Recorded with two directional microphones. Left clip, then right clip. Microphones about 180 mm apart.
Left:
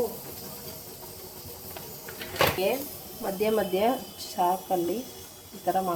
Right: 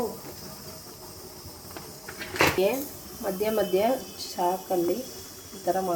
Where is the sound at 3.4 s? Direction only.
25° left (ahead or behind).